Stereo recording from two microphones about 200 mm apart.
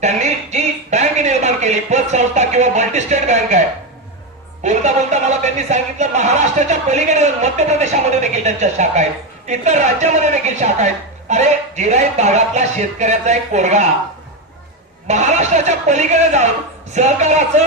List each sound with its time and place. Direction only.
0.0 s a sound: 35° right (ahead or behind)
4.6 s speech: 35° right (ahead or behind)
15.0 s speech: 35° right (ahead or behind)